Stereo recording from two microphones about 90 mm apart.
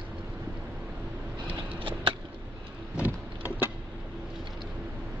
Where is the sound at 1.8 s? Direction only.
70° right (ahead or behind).